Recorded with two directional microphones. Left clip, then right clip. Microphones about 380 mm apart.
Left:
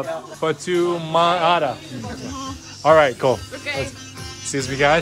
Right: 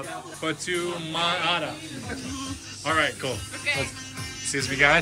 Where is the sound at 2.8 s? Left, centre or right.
Centre.